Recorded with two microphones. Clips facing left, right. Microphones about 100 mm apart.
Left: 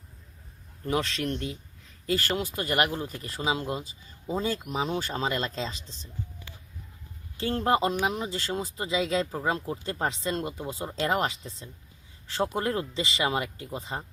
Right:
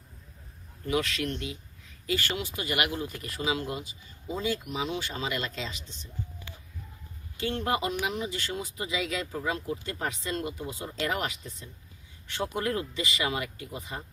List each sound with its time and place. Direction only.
0.9 s speech: 30° left (ahead or behind)
7.3 s speech: 35° left (ahead or behind)